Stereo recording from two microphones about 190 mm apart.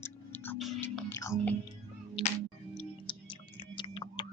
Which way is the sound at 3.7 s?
25° left (ahead or behind).